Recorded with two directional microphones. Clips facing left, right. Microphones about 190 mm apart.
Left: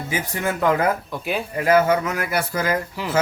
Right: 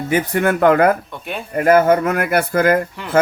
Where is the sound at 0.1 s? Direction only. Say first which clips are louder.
Right 9 dB; 60° right (ahead or behind).